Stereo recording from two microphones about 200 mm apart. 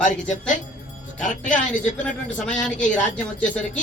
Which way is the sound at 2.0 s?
5° left (ahead or behind).